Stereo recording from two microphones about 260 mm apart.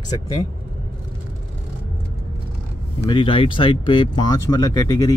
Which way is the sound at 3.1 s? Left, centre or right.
Centre.